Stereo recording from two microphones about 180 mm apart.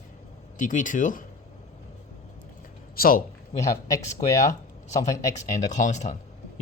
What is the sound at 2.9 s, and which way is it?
Speech, 55° left (ahead or behind).